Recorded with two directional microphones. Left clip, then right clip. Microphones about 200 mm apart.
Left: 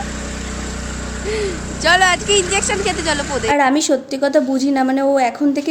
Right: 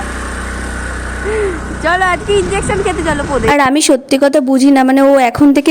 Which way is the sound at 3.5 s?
55° right (ahead or behind).